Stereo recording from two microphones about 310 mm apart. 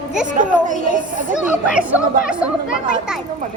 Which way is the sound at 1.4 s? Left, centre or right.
Centre.